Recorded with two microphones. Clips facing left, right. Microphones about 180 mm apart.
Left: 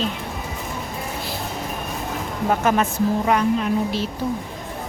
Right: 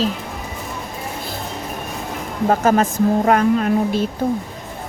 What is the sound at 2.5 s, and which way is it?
Speech, 40° right (ahead or behind).